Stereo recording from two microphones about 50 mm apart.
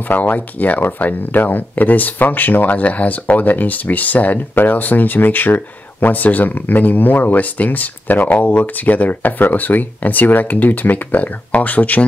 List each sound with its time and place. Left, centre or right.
0.1 s speech: left